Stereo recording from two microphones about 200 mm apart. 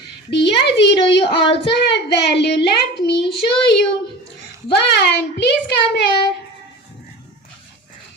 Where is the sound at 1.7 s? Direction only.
55° left (ahead or behind).